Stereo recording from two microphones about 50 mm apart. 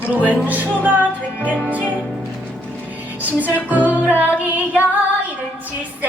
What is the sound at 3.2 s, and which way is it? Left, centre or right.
Music, right.